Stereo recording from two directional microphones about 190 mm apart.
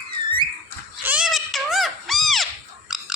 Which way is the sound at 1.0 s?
5° right (ahead or behind).